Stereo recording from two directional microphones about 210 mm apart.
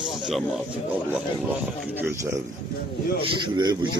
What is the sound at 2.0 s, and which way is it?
A man's voice, 10° right (ahead or behind).